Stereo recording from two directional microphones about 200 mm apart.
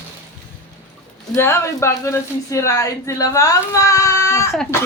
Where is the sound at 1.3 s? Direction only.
15° left (ahead or behind).